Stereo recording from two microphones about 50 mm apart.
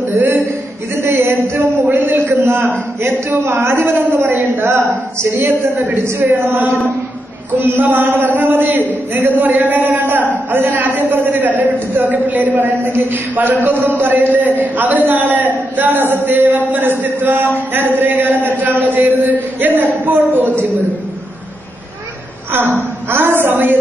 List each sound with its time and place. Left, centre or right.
1.0 s a sound: right
1.9 s a sound: right
2.1 s a sound: right
3.0 s a woman's voice: right
4.2 s a woman's voice: right
4.6 s a woman's voice: right
5.4 s a woman's voice: right
6.0 s a woman's voice: right
22.5 s a woman's voice: right